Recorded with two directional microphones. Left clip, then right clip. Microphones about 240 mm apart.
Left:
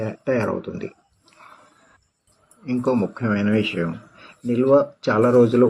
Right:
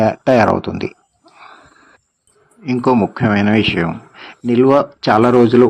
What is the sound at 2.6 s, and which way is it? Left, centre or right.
Speech, right.